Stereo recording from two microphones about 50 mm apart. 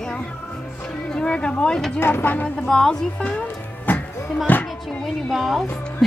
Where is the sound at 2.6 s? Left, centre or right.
Centre.